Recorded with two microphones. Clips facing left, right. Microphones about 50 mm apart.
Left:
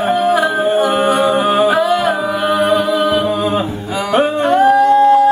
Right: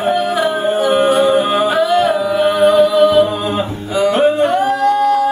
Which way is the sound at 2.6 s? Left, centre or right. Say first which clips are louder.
Right 4 dB; centre.